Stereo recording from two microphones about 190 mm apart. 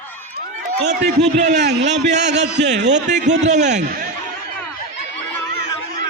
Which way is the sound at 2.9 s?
40° right (ahead or behind).